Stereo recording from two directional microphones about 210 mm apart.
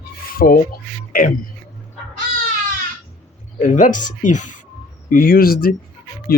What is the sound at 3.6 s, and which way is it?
Speech, 40° left (ahead or behind).